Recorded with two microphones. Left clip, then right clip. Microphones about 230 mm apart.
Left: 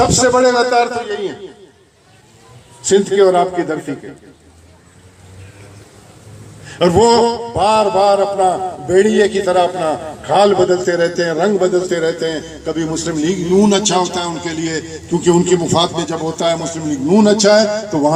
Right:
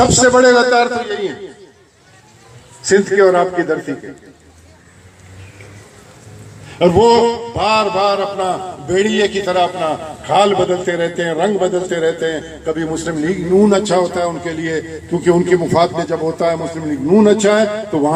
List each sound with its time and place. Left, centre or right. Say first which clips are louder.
0.0 s a man's voice: right 2 dB; right
2.8 s a man's voice: even; centre
6.7 s a man's voice: right 1 dB; centre; by 18.1 s left